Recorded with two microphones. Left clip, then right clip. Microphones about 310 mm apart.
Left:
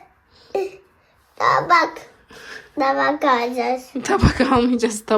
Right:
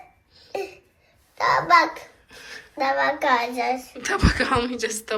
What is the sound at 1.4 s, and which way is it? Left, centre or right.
A child's voice, left.